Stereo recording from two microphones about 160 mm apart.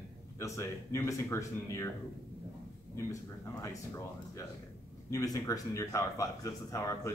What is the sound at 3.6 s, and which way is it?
Speech, 20° left (ahead or behind).